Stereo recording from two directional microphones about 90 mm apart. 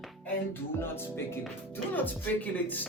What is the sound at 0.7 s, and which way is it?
Speech, 25° left (ahead or behind).